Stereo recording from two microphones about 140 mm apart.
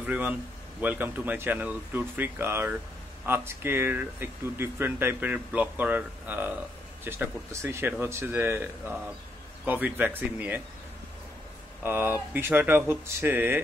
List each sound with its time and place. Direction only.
0.0 s speech: 10° right (ahead or behind)
11.8 s speech: 15° right (ahead or behind)